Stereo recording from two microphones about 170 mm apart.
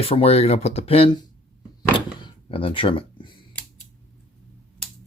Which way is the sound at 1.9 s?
30° left (ahead or behind).